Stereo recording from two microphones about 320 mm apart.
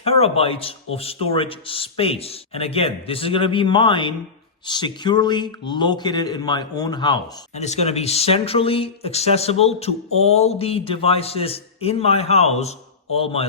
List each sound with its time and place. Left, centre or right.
0.0 s a man's voice: centre